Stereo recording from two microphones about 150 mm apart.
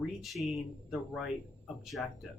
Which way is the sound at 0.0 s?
Centre (ahead or behind).